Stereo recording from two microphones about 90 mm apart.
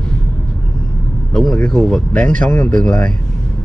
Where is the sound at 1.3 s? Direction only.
5° left (ahead or behind).